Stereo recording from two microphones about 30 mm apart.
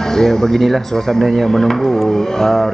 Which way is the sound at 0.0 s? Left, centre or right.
Centre.